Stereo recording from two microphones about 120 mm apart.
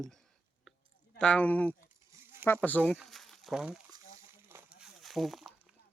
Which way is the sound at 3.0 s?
Centre (ahead or behind).